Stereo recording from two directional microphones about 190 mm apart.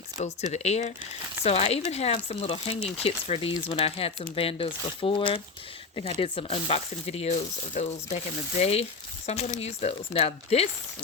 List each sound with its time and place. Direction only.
0.2 s speech: 35° left (ahead or behind)